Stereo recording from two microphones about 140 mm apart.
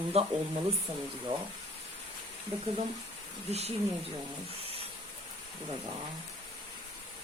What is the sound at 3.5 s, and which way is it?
Speech, 50° right (ahead or behind).